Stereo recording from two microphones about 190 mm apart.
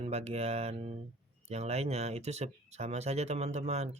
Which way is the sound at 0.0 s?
35° right (ahead or behind).